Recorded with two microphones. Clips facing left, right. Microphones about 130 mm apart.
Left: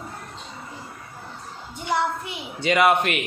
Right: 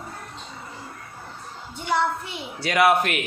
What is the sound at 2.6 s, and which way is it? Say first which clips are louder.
Speech: even; 5° right (ahead or behind).